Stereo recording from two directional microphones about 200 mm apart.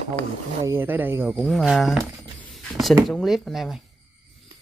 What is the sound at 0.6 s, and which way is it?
Speech, 10° right (ahead or behind).